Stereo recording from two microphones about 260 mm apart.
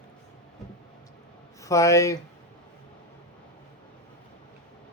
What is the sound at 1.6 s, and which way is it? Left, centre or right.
Speech, centre.